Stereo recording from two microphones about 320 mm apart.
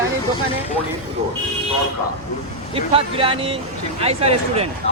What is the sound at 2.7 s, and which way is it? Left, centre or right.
Speech, centre.